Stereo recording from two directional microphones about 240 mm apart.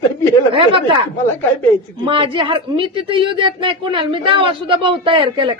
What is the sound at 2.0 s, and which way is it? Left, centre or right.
Speech, right.